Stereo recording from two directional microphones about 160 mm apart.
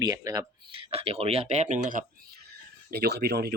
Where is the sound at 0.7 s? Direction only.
35° right (ahead or behind); by 2.1 s 50° right (ahead or behind).